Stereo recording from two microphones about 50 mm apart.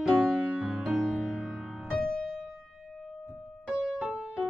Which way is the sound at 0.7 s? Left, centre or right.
Centre.